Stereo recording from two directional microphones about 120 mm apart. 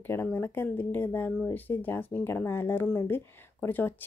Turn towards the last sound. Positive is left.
turn(degrees=15)  # may be behind; listen again after turning